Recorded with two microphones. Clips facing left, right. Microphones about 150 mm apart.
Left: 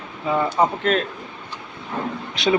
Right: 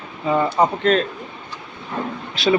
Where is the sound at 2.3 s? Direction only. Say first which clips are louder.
Right 2 dB; 20° left (ahead or behind).